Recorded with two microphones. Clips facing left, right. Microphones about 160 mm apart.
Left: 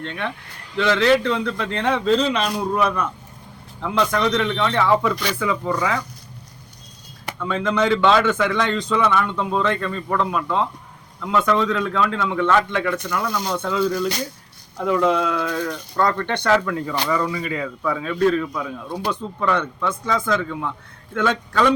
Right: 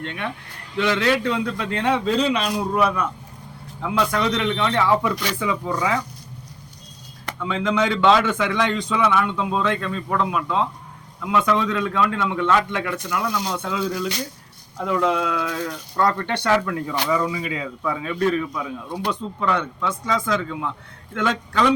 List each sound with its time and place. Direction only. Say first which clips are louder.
0.8 s speech: left 3 dB; 15° right (ahead or behind)
7.4 s speech: left 1 dB; 15° right (ahead or behind)
7.7 s a man's voice: even; 5° right (ahead or behind)
20.1 s a man's voice: left 2 dB; 5° left (ahead or behind)